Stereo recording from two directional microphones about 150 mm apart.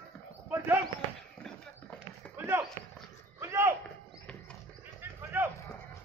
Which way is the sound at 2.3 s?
15° right (ahead or behind).